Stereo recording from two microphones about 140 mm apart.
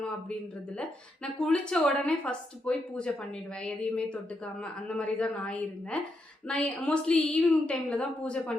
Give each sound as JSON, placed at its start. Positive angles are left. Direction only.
{"t": 0.8, "sound": "a woman's voice", "side_deg": 5}